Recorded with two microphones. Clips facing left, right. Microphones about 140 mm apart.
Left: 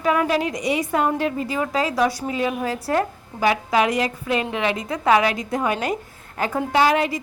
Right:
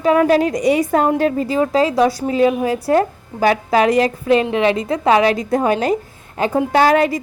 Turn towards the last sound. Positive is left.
turn(degrees=-45)  # may be behind; listen again after turning